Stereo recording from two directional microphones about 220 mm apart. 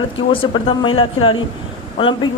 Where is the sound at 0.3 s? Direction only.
25° left (ahead or behind).